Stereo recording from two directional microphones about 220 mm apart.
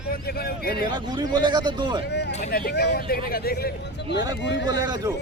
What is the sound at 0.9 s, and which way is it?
A man's voice, 20° right (ahead or behind).